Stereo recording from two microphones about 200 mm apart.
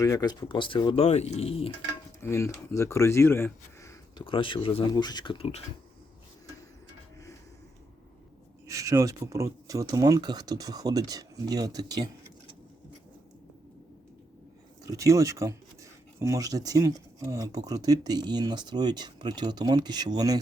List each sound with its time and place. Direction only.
0.0 s speech: 20° left (ahead or behind)
2.2 s speech: 15° left (ahead or behind); by 5.6 s 30° left (ahead or behind)
8.6 s speech: 15° right (ahead or behind)
14.8 s speech: 15° right (ahead or behind)